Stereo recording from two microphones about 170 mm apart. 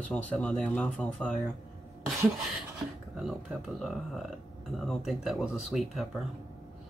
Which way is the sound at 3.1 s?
Centre (ahead or behind).